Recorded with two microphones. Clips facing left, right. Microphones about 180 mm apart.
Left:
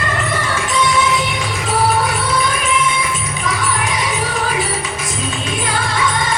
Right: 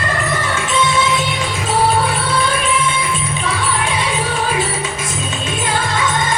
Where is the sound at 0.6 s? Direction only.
25° right (ahead or behind).